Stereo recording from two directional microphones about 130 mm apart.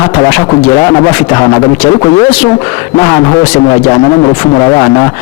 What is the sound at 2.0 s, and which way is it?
Speech, 35° left (ahead or behind).